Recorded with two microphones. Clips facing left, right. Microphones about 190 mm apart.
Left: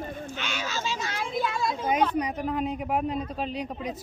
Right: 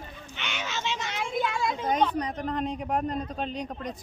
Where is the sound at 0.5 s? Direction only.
Centre (ahead or behind).